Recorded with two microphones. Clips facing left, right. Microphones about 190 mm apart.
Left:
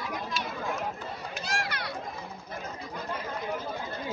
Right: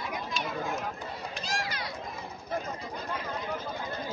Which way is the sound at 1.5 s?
60° left (ahead or behind).